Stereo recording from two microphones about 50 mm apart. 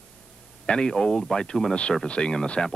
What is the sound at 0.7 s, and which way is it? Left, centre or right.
A man's voice, centre.